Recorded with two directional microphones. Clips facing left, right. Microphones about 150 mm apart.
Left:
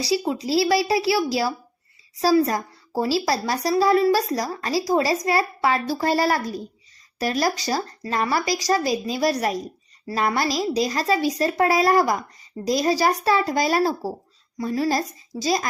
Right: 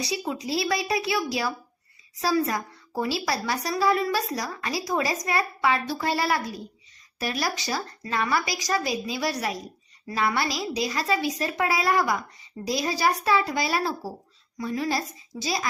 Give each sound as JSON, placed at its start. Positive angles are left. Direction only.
{"t": 0.0, "sound": "a woman's voice", "side_deg": 30}